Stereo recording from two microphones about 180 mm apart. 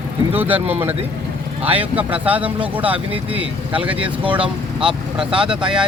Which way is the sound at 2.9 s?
30° right (ahead or behind).